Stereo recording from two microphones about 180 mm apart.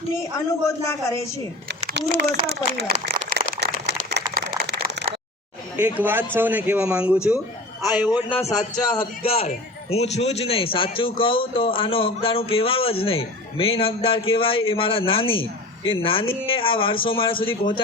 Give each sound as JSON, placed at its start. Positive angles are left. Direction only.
{"t": 1.9, "sound": "speech", "side_deg": -60}
{"t": 3.2, "sound": "a sound", "side_deg": -65}
{"t": 6.0, "sound": "a man's voice", "side_deg": -10}
{"t": 8.1, "sound": "a man's voice", "side_deg": 25}